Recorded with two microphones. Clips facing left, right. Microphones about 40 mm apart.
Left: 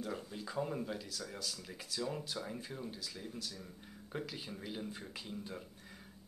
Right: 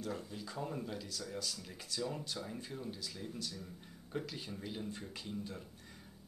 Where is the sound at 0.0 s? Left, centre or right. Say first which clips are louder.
Even; centre.